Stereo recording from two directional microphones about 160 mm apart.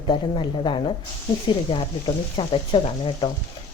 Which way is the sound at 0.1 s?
30° left (ahead or behind).